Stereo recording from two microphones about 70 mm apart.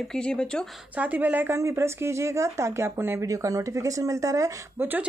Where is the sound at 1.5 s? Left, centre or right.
Right.